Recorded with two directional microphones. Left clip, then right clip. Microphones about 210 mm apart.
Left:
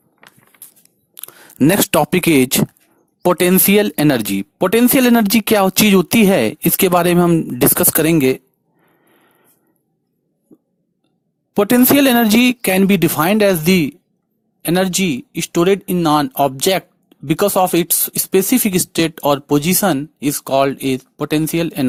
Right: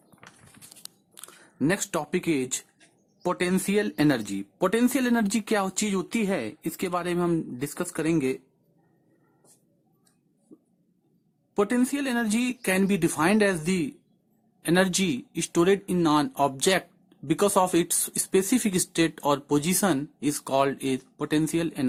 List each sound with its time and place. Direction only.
1.1 s speech: 35° left (ahead or behind)
10.5 s a sound: 25° left (ahead or behind)
11.5 s speech: 40° left (ahead or behind)